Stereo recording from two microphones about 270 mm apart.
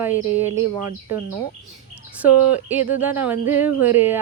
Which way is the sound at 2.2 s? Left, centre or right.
Centre.